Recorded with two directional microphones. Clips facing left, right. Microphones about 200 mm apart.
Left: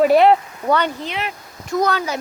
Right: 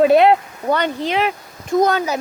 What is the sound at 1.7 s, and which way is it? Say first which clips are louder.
Speech: right 4 dB; 25° right (ahead or behind).